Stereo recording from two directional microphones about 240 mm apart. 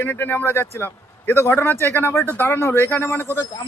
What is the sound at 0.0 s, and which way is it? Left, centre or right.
Speech, centre.